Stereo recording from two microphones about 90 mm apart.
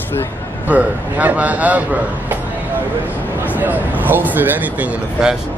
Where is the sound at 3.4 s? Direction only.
20° right (ahead or behind).